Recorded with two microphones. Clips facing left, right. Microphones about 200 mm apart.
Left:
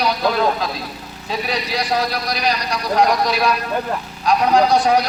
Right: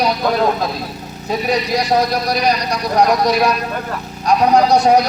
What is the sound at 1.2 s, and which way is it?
A man's voice, 45° right (ahead or behind).